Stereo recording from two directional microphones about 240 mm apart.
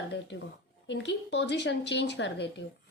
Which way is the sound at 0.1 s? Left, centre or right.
Left.